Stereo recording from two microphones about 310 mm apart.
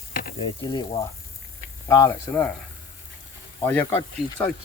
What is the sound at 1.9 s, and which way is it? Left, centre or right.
Speech, centre.